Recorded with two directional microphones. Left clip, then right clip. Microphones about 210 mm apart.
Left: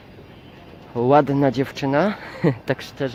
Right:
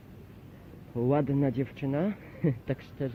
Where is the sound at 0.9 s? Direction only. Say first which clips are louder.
Left 12 dB; 15° left (ahead or behind).